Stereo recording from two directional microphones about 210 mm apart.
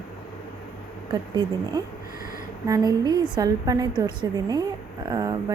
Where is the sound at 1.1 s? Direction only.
20° right (ahead or behind).